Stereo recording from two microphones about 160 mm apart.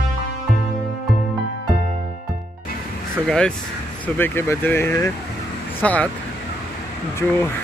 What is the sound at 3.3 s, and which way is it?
Speech, 5° left (ahead or behind).